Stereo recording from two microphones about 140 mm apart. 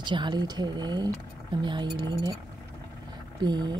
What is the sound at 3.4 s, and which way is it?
Speech, 30° right (ahead or behind).